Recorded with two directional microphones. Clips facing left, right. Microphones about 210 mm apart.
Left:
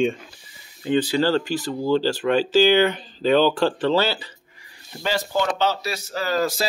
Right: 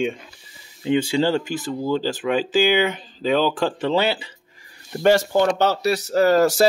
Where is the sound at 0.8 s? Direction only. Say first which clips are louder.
Right 1 dB; 15° right (ahead or behind).